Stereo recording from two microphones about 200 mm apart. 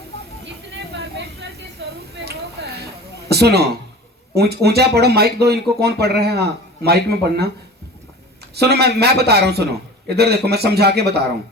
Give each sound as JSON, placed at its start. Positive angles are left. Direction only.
{"t": 0.9, "sound": "a sound", "side_deg": -55}
{"t": 4.4, "sound": "speech", "side_deg": -55}
{"t": 8.5, "sound": "speech", "side_deg": -55}